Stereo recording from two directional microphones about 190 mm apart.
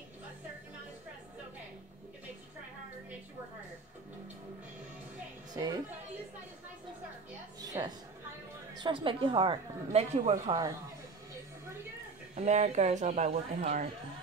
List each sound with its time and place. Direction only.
5.5 s speech: 20° right (ahead or behind)
7.6 s a sound: 20° right (ahead or behind)
8.7 s a woman's voice: 25° right (ahead or behind)
12.4 s speech: 35° right (ahead or behind)